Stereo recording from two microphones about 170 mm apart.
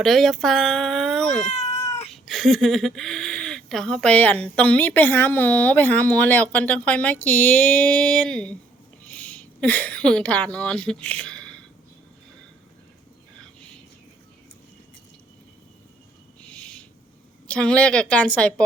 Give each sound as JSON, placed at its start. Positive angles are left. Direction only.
{"t": 0.0, "sound": "speech", "side_deg": 0}
{"t": 1.5, "sound": "cat", "side_deg": 40}
{"t": 2.2, "sound": "speech", "side_deg": 0}
{"t": 16.4, "sound": "owl", "side_deg": 5}
{"t": 17.5, "sound": "speech", "side_deg": 5}